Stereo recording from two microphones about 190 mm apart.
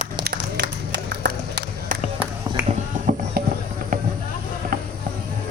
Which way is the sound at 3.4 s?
50° right (ahead or behind).